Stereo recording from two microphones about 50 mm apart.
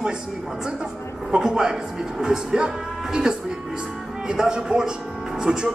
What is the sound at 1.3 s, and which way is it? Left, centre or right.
Speech, centre.